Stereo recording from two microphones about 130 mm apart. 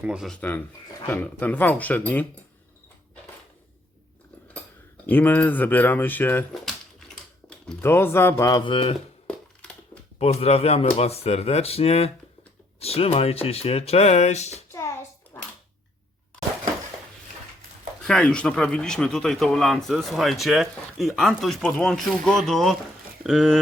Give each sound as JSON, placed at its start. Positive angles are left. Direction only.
{"t": 0.0, "sound": "speech", "side_deg": -10}
{"t": 0.3, "sound": "speech", "side_deg": 10}
{"t": 5.0, "sound": "speech", "side_deg": 15}
{"t": 7.8, "sound": "speech", "side_deg": 20}
{"t": 9.2, "sound": "a sound", "side_deg": 10}
{"t": 10.2, "sound": "speech", "side_deg": 50}
{"t": 14.7, "sound": "hands", "side_deg": 20}
{"t": 18.0, "sound": "speech", "side_deg": 5}